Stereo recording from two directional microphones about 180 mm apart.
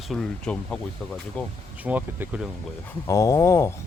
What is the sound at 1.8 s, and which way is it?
Speech, 10° right (ahead or behind).